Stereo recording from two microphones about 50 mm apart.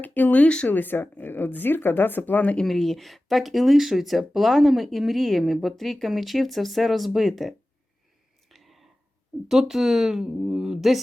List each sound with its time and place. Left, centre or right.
0.0 s speech: left
0.4 s speech: left
0.7 s speech: left
1.3 s speech: left
2.6 s speech: centre
8.4 s whispering: centre
9.5 s a woman's voice: centre